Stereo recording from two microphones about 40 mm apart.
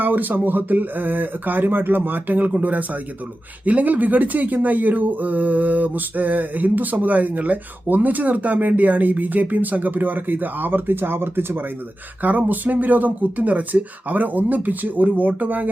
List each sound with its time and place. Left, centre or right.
0.0 s speech: right
12.2 s speech: right